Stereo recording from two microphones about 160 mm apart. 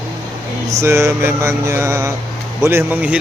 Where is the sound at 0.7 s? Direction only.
15° right (ahead or behind).